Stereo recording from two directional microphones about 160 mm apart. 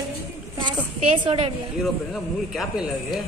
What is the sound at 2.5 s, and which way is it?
Speech, centre (ahead or behind).